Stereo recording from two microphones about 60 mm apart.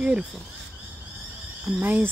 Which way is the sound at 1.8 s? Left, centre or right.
Right.